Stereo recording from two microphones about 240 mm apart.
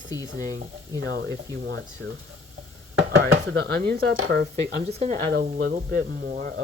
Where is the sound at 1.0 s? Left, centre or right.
Right.